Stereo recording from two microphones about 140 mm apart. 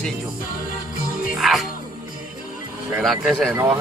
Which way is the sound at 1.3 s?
Centre (ahead or behind).